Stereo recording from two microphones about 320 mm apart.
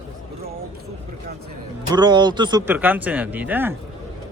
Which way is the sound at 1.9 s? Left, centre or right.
Centre.